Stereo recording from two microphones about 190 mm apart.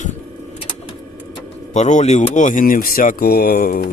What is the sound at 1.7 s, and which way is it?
Speech, 40° left (ahead or behind).